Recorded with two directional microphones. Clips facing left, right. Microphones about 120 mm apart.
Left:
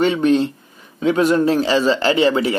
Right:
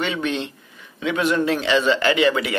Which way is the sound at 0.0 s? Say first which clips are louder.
Left 9 dB; 40° left (ahead or behind).